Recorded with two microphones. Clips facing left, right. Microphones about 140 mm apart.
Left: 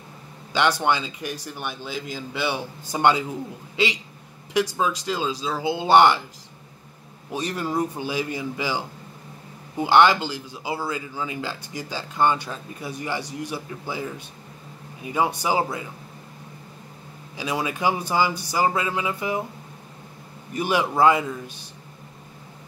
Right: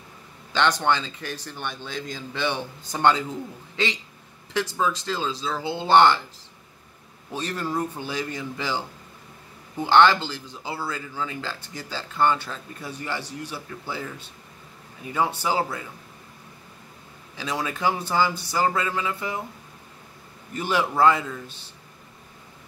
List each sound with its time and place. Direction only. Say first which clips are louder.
0.5 s speech: left 1 dB; 10° left (ahead or behind)
7.2 s speech: left 2 dB; 15° left (ahead or behind)
17.4 s speech: left 2 dB; 15° left (ahead or behind)
20.5 s speech: left 1 dB; 15° left (ahead or behind)